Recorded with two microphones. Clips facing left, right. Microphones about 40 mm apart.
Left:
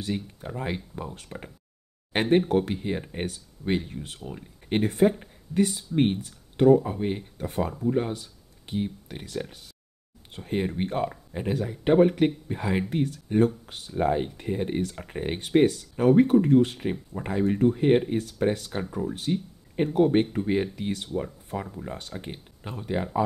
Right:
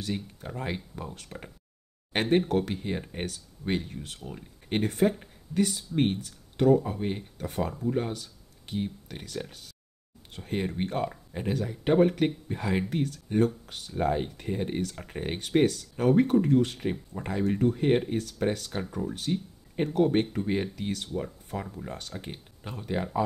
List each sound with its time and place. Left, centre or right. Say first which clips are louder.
0.0 s speech: left 3 dB; centre